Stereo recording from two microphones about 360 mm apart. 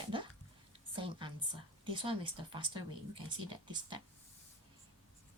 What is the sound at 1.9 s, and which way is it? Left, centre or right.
Speech, centre.